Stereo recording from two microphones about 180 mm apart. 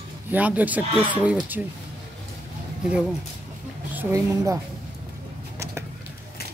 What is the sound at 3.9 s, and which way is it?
Speech, 15° right (ahead or behind).